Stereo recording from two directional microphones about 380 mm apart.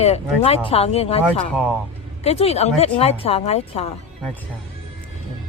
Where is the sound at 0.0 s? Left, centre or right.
Centre.